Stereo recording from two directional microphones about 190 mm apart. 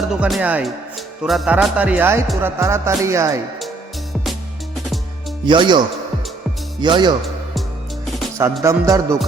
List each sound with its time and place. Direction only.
0.1 s speech: 5° right (ahead or behind)
5.5 s speech: 25° right (ahead or behind)
6.8 s speech: 25° right (ahead or behind)
8.6 s speech: 15° right (ahead or behind)